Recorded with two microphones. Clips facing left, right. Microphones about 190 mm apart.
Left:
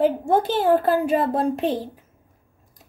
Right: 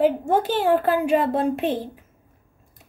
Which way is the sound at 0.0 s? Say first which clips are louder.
Even; 15° right (ahead or behind).